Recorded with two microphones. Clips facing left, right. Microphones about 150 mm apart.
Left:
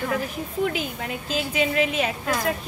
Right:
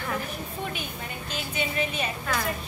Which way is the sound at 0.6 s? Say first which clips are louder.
Left 12 dB; 90° left.